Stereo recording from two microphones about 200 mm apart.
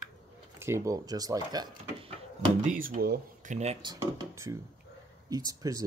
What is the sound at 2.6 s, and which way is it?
Speech, 40° right (ahead or behind).